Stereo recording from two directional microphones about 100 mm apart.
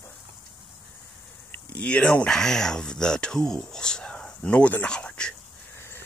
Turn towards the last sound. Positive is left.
turn(degrees=10)  # may be behind; listen again after turning